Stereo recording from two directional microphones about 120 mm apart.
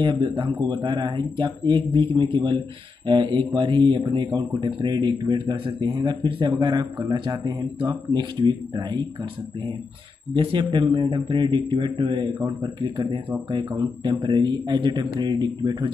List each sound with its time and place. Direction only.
0.0 s a man's voice: 45° right (ahead or behind)